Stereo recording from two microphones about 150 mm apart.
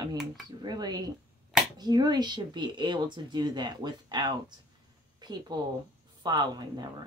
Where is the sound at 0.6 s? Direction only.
25° right (ahead or behind).